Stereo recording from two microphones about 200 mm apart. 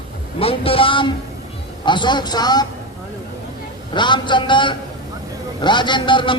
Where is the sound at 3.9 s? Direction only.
25° left (ahead or behind).